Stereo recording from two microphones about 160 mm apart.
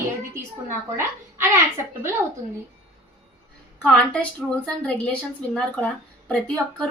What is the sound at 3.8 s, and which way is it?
Speech, 5° left (ahead or behind).